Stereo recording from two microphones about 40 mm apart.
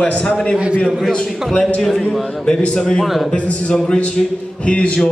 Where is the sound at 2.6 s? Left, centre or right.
Left.